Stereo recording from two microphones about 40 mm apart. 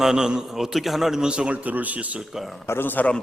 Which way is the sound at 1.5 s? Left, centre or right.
Right.